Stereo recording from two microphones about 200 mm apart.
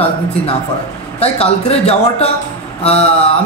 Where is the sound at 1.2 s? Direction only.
30° left (ahead or behind).